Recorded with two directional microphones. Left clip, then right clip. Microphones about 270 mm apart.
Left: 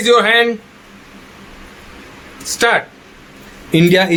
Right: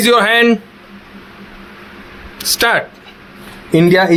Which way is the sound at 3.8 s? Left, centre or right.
Centre.